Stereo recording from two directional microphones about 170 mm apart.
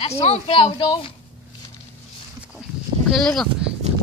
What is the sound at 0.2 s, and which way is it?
Speech, 35° left (ahead or behind).